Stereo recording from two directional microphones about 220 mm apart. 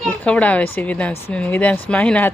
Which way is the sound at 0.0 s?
5° left (ahead or behind).